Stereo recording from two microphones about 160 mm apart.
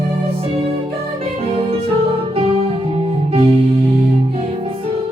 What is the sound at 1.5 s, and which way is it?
Music, 35° right (ahead or behind).